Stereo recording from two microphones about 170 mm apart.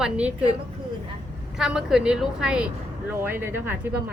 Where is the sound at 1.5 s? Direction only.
5° right (ahead or behind).